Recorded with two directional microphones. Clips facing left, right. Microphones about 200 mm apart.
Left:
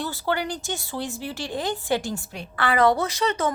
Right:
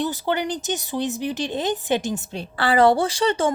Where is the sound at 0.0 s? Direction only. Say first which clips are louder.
Right 3 dB; 20° right (ahead or behind).